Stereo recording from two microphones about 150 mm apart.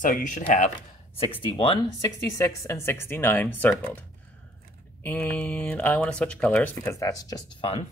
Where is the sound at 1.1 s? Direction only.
40° left (ahead or behind); by 4.0 s 10° left (ahead or behind).